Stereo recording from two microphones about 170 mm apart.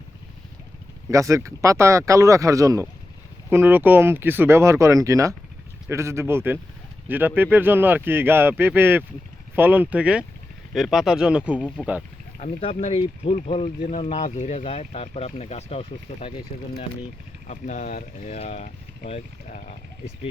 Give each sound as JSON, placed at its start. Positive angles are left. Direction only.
{"t": 1.1, "sound": "speech", "side_deg": -20}
{"t": 12.4, "sound": "speech", "side_deg": 40}
{"t": 17.4, "sound": "speech", "side_deg": 45}